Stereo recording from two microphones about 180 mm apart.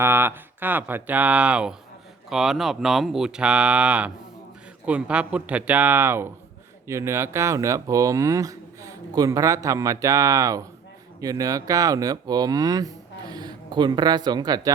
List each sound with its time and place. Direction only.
0.0 s speech: 15° right (ahead or behind)